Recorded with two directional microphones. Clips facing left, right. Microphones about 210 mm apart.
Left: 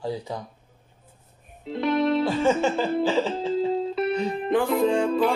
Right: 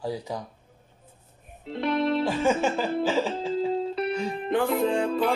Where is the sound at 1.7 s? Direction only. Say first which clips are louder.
Left 3 dB; 40° left (ahead or behind).